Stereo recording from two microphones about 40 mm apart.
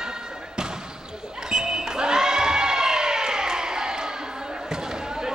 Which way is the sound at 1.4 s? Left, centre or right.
Centre.